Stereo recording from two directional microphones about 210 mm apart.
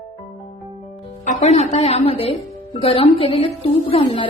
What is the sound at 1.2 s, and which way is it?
Music, 30° left (ahead or behind).